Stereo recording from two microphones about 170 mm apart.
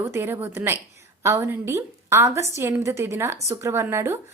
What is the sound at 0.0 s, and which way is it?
A woman's voice, 15° right (ahead or behind).